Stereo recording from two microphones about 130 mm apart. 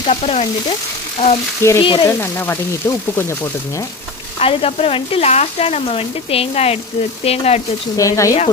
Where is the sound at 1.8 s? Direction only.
40° left (ahead or behind).